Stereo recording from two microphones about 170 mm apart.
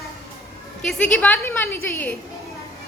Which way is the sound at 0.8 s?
5° left (ahead or behind).